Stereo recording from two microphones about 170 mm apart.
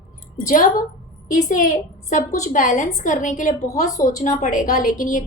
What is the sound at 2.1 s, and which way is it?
A woman's voice, 50° left (ahead or behind).